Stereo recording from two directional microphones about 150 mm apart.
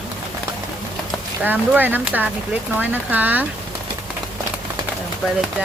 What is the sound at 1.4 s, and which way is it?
Speech, 10° right (ahead or behind).